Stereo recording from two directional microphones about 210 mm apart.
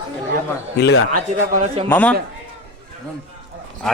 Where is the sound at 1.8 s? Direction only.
10° left (ahead or behind).